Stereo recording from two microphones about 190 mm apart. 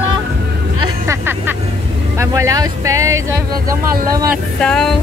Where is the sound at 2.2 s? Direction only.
15° right (ahead or behind).